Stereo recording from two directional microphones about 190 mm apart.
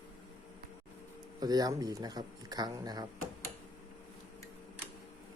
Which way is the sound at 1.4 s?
20° right (ahead or behind).